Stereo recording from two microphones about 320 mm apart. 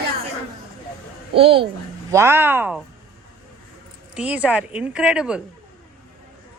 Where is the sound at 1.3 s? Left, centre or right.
Centre.